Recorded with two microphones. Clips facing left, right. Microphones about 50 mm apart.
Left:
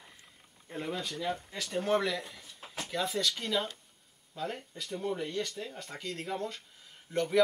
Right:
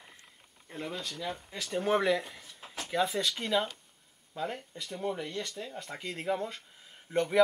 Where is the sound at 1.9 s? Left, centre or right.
Centre.